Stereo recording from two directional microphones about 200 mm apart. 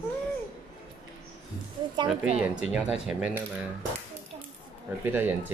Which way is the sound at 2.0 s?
5° right (ahead or behind).